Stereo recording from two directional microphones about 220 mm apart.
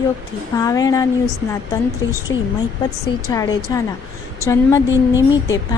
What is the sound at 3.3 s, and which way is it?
Speech, 15° left (ahead or behind).